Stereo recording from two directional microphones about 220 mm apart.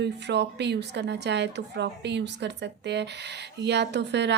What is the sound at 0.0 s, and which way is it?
Speech, 50° right (ahead or behind).